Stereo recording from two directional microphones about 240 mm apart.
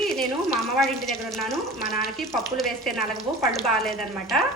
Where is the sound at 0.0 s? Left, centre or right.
Centre.